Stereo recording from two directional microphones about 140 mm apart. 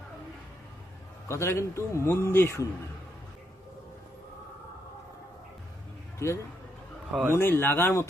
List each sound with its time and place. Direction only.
1.3 s speech: 20° left (ahead or behind)
6.2 s speech: 20° left (ahead or behind)